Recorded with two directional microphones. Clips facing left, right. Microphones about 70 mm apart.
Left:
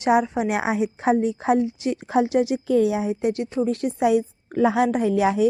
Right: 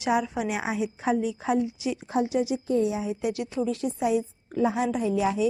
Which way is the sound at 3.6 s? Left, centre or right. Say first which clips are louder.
Left 6 dB; left.